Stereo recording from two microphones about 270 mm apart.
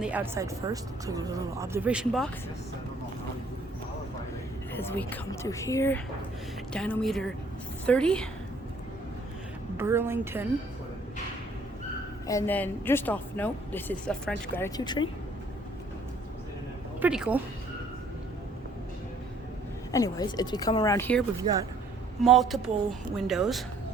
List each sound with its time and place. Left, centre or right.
0.0 s speech: centre
4.7 s a woman's voice: centre
9.7 s speech: centre
12.3 s speech: centre
17.0 s a woman's voice: centre
19.9 s speech: centre
21.4 s speech: centre
22.2 s a woman's voice: centre